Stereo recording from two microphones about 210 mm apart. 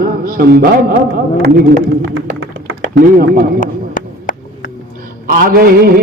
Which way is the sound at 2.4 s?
70° right (ahead or behind).